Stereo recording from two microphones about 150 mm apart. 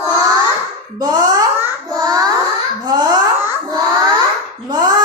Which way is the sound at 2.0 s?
25° right (ahead or behind).